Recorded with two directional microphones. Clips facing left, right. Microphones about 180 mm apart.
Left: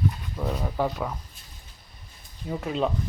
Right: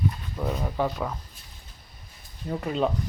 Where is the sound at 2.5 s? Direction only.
Centre (ahead or behind).